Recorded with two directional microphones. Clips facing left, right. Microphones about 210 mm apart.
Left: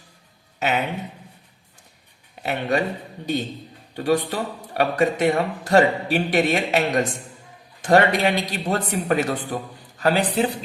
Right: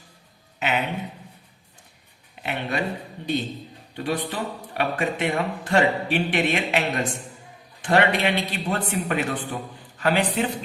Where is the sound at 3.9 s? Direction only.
45° left (ahead or behind).